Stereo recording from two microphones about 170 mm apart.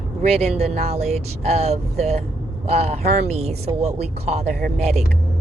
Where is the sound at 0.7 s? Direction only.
40° right (ahead or behind).